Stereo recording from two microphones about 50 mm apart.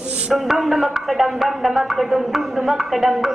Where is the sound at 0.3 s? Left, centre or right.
Centre.